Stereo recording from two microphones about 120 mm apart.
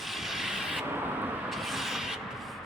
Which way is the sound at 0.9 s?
15° right (ahead or behind).